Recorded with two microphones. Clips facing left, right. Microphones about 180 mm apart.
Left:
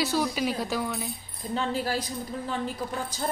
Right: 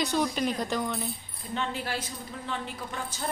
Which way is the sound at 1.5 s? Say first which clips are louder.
Left 4 dB; 35° left (ahead or behind).